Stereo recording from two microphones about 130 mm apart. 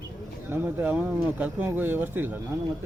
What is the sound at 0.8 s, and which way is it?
Speech, 10° right (ahead or behind).